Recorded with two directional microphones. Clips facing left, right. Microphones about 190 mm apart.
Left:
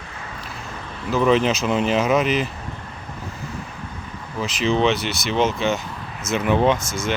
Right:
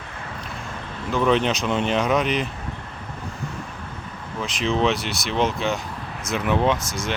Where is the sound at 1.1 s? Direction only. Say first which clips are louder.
Left 2 dB; centre (ahead or behind).